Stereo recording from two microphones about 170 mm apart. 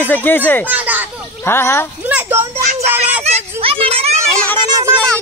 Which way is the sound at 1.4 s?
15° left (ahead or behind).